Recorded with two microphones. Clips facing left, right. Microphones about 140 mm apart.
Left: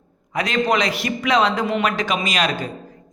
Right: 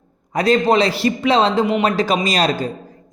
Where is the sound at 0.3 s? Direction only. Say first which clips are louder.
Right 5 dB; 35° right (ahead or behind).